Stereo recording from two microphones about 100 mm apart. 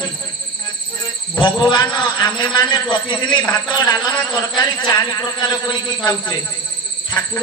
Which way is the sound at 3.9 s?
40° left (ahead or behind).